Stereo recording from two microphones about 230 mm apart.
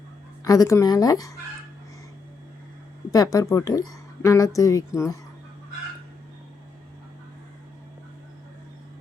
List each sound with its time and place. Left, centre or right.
0.4 s a woman's voice: centre
3.1 s a woman's voice: centre